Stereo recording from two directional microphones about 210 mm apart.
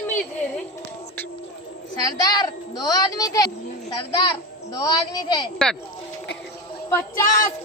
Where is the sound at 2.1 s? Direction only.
20° left (ahead or behind).